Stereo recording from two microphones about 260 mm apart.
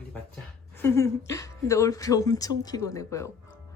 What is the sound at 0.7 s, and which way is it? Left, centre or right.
Speech, centre.